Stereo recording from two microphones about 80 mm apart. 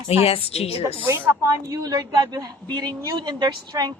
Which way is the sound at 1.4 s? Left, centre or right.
Right.